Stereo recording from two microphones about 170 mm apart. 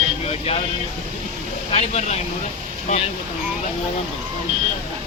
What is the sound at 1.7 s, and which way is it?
Speech, 40° left (ahead or behind).